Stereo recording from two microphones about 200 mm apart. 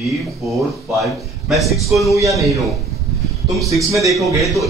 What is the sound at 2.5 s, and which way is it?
Speech, centre (ahead or behind).